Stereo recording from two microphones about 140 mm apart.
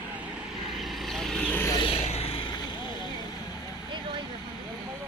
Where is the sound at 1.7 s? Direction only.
40° left (ahead or behind).